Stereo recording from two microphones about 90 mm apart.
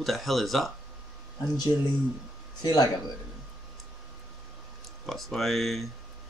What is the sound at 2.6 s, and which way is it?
Speech, 45° left (ahead or behind).